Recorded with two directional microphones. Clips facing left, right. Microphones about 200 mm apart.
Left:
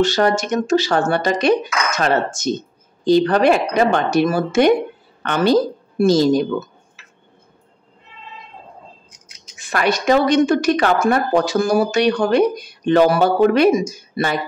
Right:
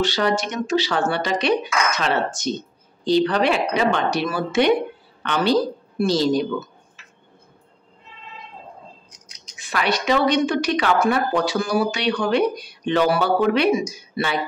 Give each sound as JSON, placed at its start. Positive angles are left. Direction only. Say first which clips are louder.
{"t": 0.0, "sound": "a woman's voice", "louder": "left 4 dB", "side_deg": 45}
{"t": 9.6, "sound": "speech", "louder": "left 4 dB", "side_deg": 45}